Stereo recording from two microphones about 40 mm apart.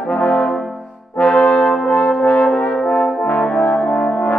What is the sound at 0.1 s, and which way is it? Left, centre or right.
Brass instrument, left.